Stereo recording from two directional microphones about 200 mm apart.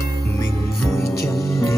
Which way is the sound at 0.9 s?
15° left (ahead or behind).